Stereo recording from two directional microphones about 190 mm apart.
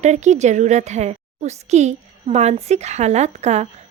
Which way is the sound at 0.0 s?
40° right (ahead or behind).